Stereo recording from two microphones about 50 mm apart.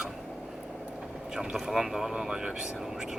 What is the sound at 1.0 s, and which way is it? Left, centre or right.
Vehicle, centre.